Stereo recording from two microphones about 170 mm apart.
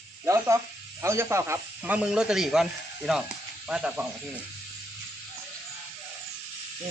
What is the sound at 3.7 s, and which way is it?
Speech, 5° right (ahead or behind).